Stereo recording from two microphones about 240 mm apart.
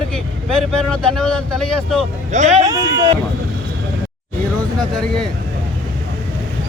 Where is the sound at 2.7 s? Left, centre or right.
Centre.